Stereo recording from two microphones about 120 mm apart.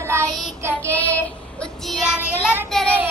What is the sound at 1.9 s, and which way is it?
Child singing, 5° right (ahead or behind).